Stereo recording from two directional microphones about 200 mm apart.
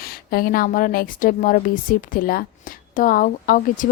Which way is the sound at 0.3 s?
45° left (ahead or behind).